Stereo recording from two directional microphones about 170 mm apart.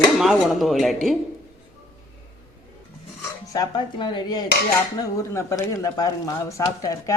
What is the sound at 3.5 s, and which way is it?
Speech, 25° left (ahead or behind).